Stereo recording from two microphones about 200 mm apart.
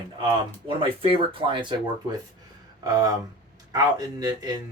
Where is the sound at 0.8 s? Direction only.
25° right (ahead or behind).